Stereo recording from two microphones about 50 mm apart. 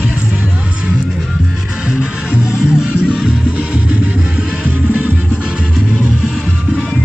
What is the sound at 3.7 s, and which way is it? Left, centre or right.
Music, right.